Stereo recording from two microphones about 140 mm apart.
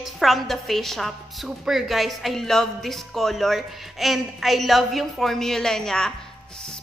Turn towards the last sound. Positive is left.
turn(degrees=5)  # may be behind; listen again after turning